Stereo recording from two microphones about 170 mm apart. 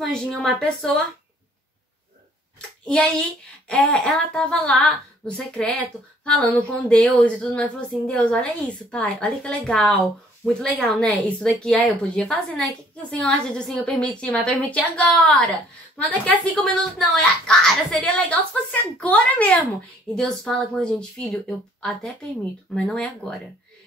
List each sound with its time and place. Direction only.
0.1 s a woman's voice: centre (ahead or behind)
3.6 s a woman's voice: 5° left (ahead or behind)